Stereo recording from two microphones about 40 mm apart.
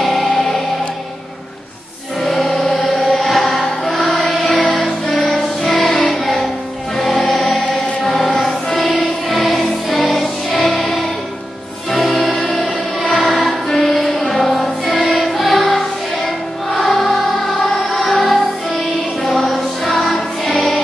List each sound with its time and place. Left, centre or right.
0.0 s music: centre
2.2 s chant: centre
5.3 s music: centre